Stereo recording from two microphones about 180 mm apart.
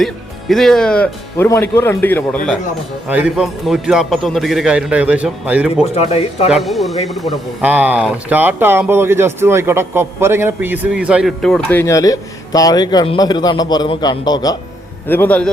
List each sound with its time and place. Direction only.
0.0 s a man's voice: centre (ahead or behind)
3.1 s speech: 5° right (ahead or behind)
5.9 s speech: 35° left (ahead or behind)
6.5 s speech: centre (ahead or behind); by 14.5 s 20° left (ahead or behind)
15.0 s a man's voice: 10° left (ahead or behind)